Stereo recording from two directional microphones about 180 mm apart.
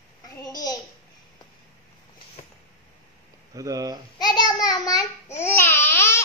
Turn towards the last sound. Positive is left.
turn(degrees=15)  # may be behind; listen again after turning